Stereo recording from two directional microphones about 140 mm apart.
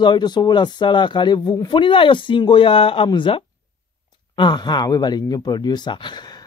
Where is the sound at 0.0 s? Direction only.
35° left (ahead or behind).